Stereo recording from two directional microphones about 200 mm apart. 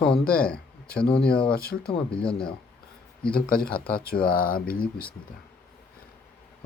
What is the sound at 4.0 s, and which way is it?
Speech, 45° left (ahead or behind).